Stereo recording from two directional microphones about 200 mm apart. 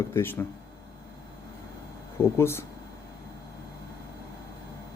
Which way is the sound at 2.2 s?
10° left (ahead or behind).